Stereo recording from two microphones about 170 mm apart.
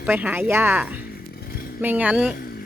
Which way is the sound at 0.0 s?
10° right (ahead or behind).